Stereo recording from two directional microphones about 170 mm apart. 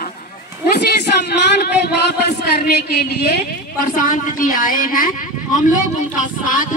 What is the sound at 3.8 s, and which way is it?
Speech, 50° left (ahead or behind).